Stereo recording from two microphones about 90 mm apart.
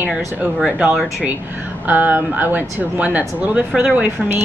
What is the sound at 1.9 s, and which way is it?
Speech, 20° right (ahead or behind).